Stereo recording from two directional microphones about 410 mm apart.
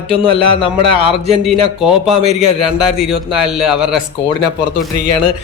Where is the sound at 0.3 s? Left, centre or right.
Centre.